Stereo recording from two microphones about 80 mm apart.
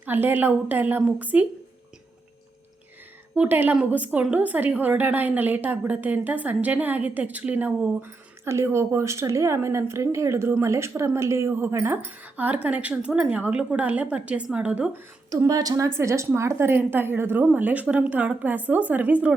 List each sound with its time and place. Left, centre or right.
0.0 s a woman's voice: right
3.3 s a woman's voice: centre
8.4 s a woman's voice: right; by 14.8 s centre
15.4 s a woman's voice: right
16.0 s a woman's voice: right